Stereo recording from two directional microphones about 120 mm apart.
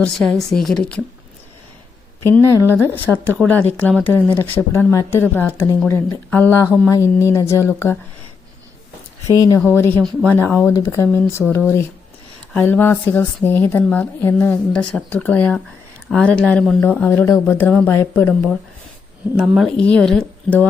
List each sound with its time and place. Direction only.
0.0 s a woman's voice: 5° left (ahead or behind)
2.3 s speech: 20° left (ahead or behind)
3.1 s a woman's voice: centre (ahead or behind)
3.4 s a woman's voice: 10° left (ahead or behind)
9.2 s a woman's voice: 30° left (ahead or behind)
19.5 s a woman's voice: 5° left (ahead or behind)